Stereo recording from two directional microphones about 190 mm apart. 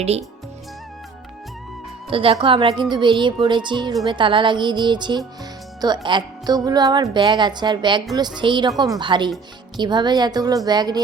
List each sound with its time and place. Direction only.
0.0 s speech: 35° right (ahead or behind)
2.0 s speech: 30° right (ahead or behind)